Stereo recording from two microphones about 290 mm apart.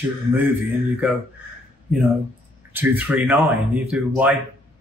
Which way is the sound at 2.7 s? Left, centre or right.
Centre.